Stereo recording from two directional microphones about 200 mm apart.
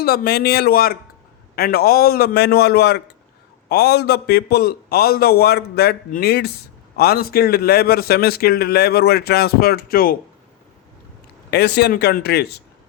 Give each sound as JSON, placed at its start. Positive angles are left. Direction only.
{"t": 0.0, "sound": "a man's voice", "side_deg": 50}
{"t": 11.5, "sound": "speech", "side_deg": 55}